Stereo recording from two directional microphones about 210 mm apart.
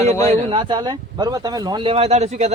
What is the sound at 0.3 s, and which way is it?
Speech, 25° right (ahead or behind).